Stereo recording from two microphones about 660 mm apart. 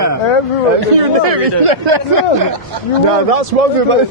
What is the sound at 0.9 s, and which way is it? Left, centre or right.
Speech, right.